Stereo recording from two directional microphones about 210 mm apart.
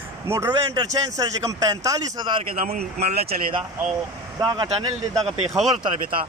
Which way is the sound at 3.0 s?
50° right (ahead or behind).